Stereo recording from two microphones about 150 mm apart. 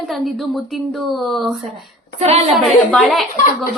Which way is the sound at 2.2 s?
45° right (ahead or behind).